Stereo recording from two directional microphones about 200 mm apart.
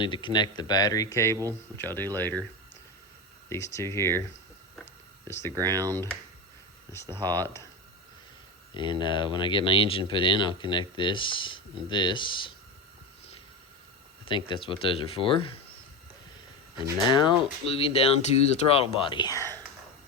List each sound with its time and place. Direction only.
0.0 s speech: 25° left (ahead or behind)
3.5 s speech: 15° left (ahead or behind)
5.3 s speech: 15° left (ahead or behind)
5.5 s speech: 20° right (ahead or behind)
5.9 s speech: 10° left (ahead or behind)
8.7 s speech: 25° left (ahead or behind)
14.3 s speech: 25° left (ahead or behind)
17.1 s speech: 25° left (ahead or behind)